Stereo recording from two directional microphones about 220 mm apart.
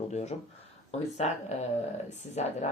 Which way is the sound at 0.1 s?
30° left (ahead or behind).